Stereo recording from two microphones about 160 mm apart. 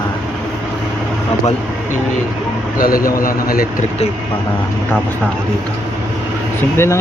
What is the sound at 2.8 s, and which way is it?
Speech, 60° left (ahead or behind).